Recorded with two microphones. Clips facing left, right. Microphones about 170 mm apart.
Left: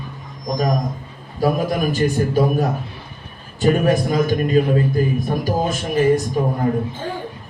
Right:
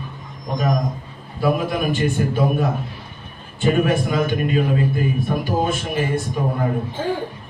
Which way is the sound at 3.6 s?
40° left (ahead or behind).